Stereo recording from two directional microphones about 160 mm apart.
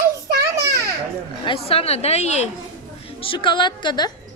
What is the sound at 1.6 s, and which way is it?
Speech, 40° left (ahead or behind).